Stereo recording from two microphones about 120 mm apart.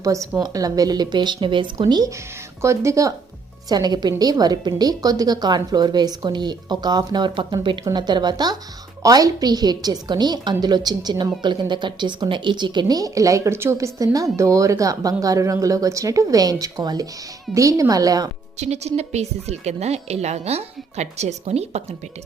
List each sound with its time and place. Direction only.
0.0 s a woman's voice: 25° right (ahead or behind)
18.5 s a woman's voice: 65° right (ahead or behind)